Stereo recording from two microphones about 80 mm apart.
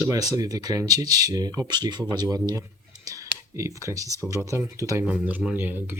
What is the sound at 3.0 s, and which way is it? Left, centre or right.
Clicking, right.